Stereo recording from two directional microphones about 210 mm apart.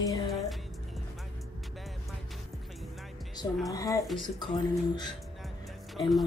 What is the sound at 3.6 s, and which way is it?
Speech, 15° left (ahead or behind).